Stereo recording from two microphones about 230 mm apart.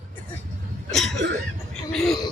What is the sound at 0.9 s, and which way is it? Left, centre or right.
Speech, centre.